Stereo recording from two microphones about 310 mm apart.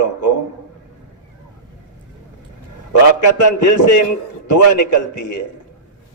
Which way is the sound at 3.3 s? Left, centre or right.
Left.